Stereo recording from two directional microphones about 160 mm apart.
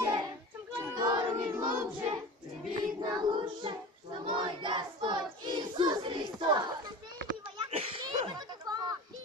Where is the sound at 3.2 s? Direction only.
30° right (ahead or behind).